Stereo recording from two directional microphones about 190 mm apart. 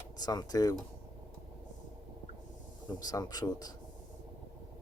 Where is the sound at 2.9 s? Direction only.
20° left (ahead or behind).